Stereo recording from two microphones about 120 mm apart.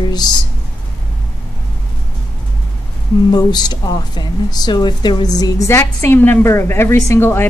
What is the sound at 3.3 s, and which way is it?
A woman's voice, 35° left (ahead or behind).